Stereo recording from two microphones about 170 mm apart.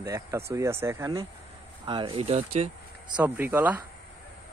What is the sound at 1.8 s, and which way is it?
Speech, 30° right (ahead or behind).